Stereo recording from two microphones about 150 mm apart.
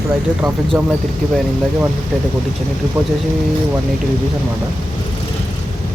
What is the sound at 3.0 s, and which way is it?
Speech, 10° right (ahead or behind).